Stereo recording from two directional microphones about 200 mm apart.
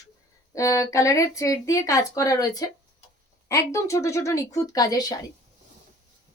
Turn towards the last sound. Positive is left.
turn(degrees=20)  # may be behind; listen again after turning